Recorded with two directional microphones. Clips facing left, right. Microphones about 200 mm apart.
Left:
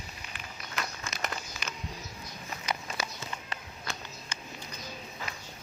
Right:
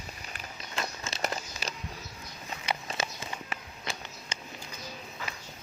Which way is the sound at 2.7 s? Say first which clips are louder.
Right 2 dB; 25° right (ahead or behind).